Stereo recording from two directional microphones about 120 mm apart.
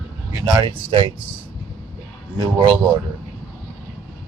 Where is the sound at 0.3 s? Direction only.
35° right (ahead or behind).